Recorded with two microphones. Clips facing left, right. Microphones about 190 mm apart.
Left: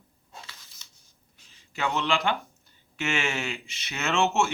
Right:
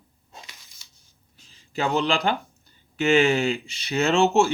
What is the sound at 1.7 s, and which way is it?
Speech, 35° right (ahead or behind).